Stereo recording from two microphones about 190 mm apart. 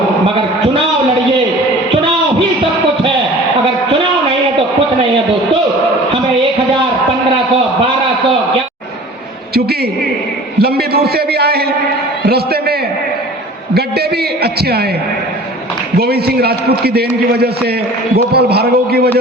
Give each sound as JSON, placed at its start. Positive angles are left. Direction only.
{"t": 10.6, "sound": "a man's voice", "side_deg": -55}
{"t": 12.2, "sound": "a sound", "side_deg": -55}
{"t": 14.4, "sound": "a man's voice", "side_deg": -55}
{"t": 16.0, "sound": "a man's voice", "side_deg": -55}
{"t": 18.3, "sound": "a man's voice", "side_deg": -55}